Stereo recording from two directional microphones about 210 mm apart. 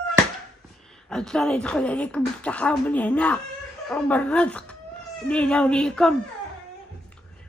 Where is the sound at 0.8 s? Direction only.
5° left (ahead or behind).